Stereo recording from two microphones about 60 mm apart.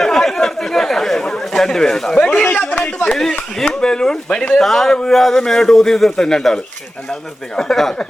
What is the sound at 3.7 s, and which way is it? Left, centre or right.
Speech, centre.